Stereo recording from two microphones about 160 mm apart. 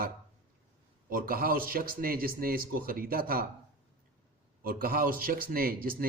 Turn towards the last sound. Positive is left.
turn(degrees=-65)  # may be behind; listen again after turning